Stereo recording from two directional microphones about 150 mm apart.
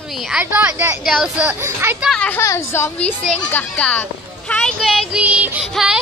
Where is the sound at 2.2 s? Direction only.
10° left (ahead or behind).